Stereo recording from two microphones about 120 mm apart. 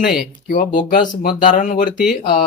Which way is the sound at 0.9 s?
90° left.